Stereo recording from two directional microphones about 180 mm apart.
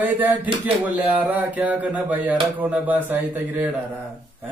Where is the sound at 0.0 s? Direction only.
10° right (ahead or behind).